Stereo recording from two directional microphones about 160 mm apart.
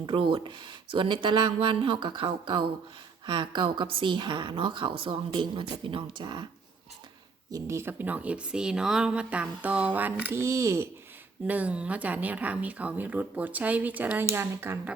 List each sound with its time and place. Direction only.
0.0 s a woman's voice: 30° right (ahead or behind)
7.5 s speech: 15° right (ahead or behind)